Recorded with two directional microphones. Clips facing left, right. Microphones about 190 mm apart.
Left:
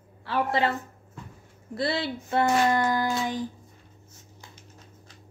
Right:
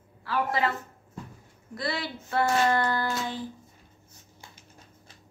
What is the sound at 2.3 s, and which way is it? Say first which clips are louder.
Speech: left 2 dB; 15° left (ahead or behind).